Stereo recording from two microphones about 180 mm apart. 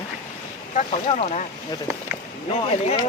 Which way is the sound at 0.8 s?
35° left (ahead or behind).